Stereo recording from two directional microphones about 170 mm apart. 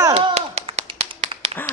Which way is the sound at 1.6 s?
10° left (ahead or behind).